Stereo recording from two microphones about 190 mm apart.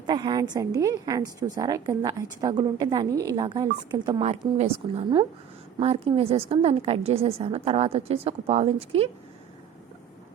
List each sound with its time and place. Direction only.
0.0 s a woman's voice: 25° right (ahead or behind)